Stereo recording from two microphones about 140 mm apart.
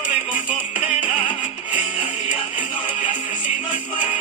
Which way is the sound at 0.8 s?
40° left (ahead or behind).